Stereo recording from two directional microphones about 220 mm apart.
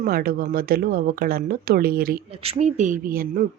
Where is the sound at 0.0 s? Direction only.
45° right (ahead or behind).